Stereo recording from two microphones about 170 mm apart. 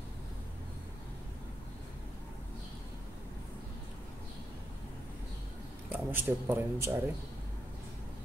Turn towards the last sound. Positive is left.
turn(degrees=-10)  # may be behind; listen again after turning